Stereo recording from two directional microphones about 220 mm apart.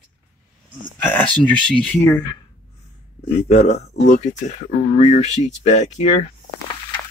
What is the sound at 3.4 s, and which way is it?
Speech, 30° left (ahead or behind).